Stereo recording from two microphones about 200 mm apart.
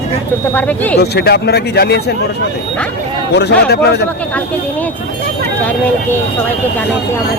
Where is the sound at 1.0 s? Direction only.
55° left (ahead or behind).